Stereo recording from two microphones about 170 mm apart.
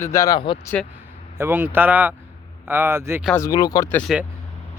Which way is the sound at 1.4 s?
10° right (ahead or behind).